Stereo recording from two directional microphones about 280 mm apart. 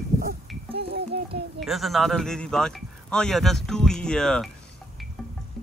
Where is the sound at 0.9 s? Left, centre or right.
Right.